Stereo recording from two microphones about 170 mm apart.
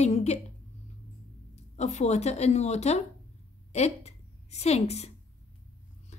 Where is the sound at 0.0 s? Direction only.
40° left (ahead or behind).